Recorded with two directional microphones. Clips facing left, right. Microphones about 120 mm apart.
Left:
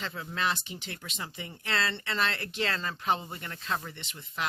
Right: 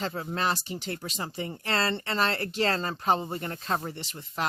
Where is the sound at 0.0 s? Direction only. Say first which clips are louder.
Right 3 dB; 40° right (ahead or behind).